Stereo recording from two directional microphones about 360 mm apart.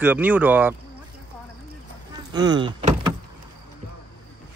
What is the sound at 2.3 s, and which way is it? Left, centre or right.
Speech, centre.